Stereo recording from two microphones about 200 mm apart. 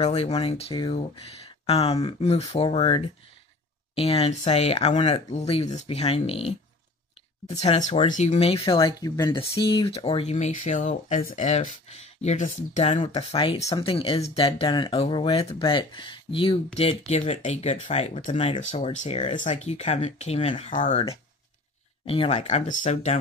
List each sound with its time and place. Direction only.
0.0 s speech: 30° left (ahead or behind)
13.6 s speech: 15° left (ahead or behind)
13.8 s speech: 25° left (ahead or behind)